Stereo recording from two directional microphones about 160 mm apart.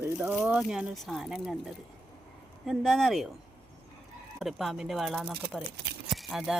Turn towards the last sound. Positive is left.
turn(degrees=0)  # may be behind; listen again after turning